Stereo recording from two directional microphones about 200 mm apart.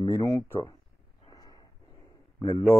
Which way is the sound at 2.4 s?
15° left (ahead or behind).